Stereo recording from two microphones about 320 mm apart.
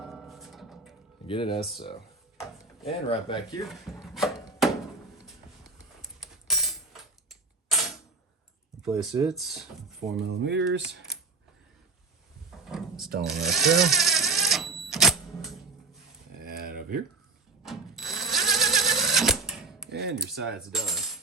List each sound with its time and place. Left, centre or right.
0.0 s music: centre
1.3 s speech: centre
2.8 s speech: centre
3.7 s speech: centre
4.6 s a sound: centre
8.8 s speech: centre
10.2 s speech: right
12.6 s a sound: centre
13.2 s cash register: centre
16.4 s a sound: right
17.6 s cash register: centre
19.9 s speech: right
20.1 s coin: centre